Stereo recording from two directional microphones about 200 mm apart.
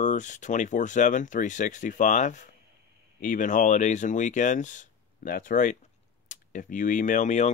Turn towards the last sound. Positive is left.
turn(degrees=40)  # may be behind; listen again after turning